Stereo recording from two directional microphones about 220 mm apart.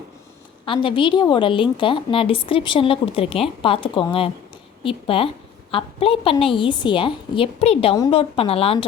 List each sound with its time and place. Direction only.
0.6 s a woman's voice: 25° left (ahead or behind)